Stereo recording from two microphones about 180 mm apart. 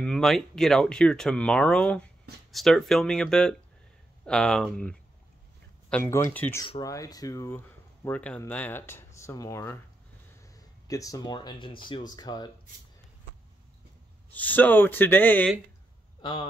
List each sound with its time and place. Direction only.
0.0 s speech: centre (ahead or behind)
5.9 s speech: 10° left (ahead or behind)
14.3 s speech: 10° left (ahead or behind)
16.2 s speech: 25° left (ahead or behind)